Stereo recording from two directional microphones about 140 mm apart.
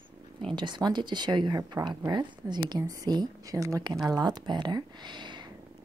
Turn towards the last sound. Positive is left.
turn(degrees=-30)  # may be behind; listen again after turning